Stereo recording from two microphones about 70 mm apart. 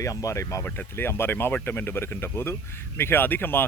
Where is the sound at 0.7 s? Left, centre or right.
Left.